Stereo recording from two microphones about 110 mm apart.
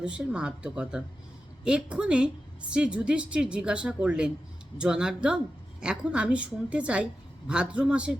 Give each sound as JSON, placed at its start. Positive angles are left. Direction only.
{"t": 0.0, "sound": "a woman's voice", "side_deg": -10}